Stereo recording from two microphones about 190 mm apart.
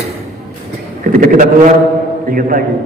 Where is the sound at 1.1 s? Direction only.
45° right (ahead or behind).